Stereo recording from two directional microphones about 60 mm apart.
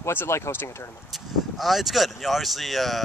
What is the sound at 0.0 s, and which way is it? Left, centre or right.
Speech, left.